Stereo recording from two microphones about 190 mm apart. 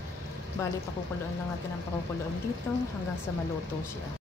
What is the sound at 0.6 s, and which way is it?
Speech, 15° left (ahead or behind).